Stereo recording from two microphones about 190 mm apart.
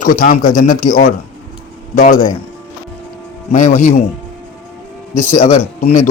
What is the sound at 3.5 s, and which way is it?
Speech, 40° left (ahead or behind).